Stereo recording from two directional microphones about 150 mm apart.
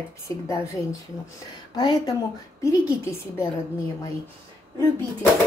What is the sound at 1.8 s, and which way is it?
Speech, 25° left (ahead or behind).